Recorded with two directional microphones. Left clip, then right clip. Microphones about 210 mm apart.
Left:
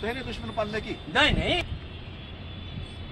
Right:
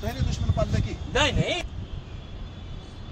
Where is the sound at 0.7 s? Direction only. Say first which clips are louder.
Left 3 dB; 55° right (ahead or behind).